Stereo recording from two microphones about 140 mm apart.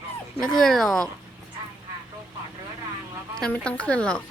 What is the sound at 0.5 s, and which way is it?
Speech, 5° left (ahead or behind).